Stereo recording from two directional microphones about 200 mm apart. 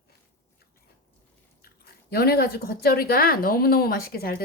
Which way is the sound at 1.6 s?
50° left (ahead or behind).